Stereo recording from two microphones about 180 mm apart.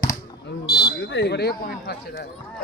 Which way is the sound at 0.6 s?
65° left (ahead or behind).